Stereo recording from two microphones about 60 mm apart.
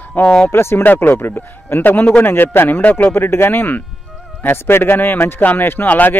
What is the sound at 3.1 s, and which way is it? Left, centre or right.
A man's voice, left.